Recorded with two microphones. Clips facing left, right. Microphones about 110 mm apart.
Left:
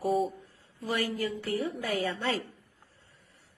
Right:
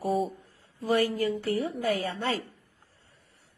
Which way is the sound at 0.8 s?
50° right (ahead or behind).